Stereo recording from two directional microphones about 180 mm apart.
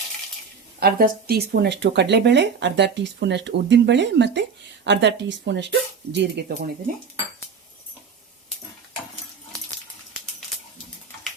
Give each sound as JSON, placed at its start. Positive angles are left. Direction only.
{"t": 0.8, "sound": "speech", "side_deg": -55}